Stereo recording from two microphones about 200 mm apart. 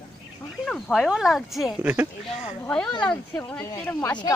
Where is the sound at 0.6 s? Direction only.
Centre (ahead or behind).